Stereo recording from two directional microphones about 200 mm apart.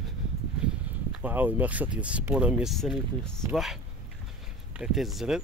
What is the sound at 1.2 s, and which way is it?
Speech, 10° right (ahead or behind).